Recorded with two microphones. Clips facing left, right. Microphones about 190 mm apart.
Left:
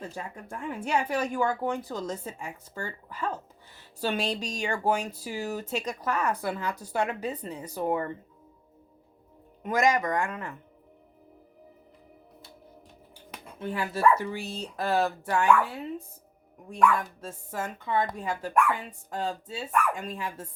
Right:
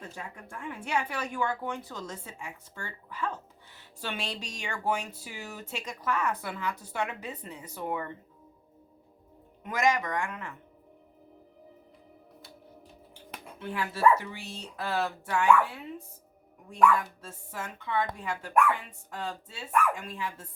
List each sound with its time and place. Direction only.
0.1 s a woman's voice: 40° left (ahead or behind)
9.6 s a woman's voice: 40° left (ahead or behind)
13.6 s speech: 40° left (ahead or behind)
17.2 s a woman's voice: 45° left (ahead or behind)